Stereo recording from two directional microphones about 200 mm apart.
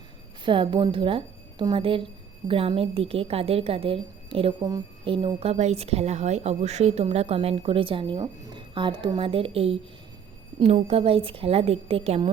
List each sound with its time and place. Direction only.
0.4 s a woman's voice: 25° right (ahead or behind)